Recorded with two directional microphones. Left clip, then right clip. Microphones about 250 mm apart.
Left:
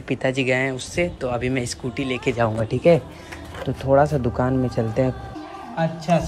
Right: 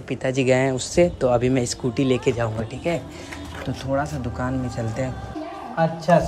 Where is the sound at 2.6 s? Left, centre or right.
Centre.